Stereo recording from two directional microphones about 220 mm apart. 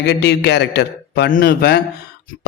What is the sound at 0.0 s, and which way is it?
A man's voice, 50° left (ahead or behind).